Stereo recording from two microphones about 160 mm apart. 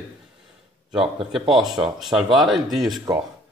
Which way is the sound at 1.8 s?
Centre (ahead or behind).